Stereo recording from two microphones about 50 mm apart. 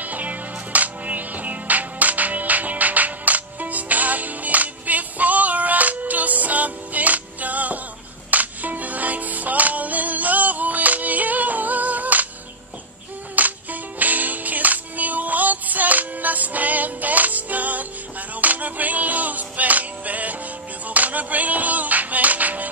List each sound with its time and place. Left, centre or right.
0.0 s music: right
13.4 s music: right